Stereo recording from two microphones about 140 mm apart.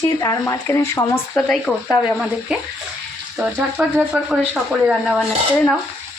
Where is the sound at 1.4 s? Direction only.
5° left (ahead or behind).